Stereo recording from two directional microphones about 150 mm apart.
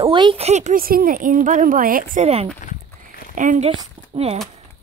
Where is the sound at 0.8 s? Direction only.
75° right (ahead or behind).